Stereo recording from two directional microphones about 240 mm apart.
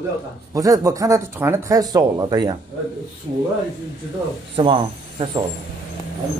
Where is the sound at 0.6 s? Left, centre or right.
Centre.